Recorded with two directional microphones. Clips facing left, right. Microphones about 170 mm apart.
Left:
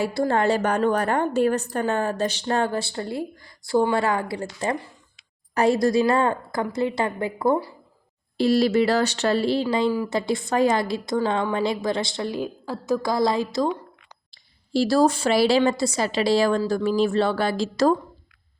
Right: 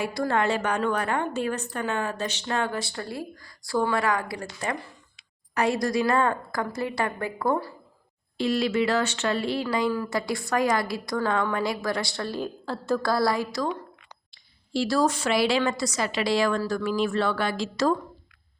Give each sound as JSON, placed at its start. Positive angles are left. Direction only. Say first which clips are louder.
{"t": 0.0, "sound": "a woman's voice", "louder": "left 4 dB", "side_deg": 30}
{"t": 8.4, "sound": "a woman's voice", "louder": "left 5 dB", "side_deg": 35}
{"t": 14.7, "sound": "a woman's voice", "louder": "left 5 dB", "side_deg": 35}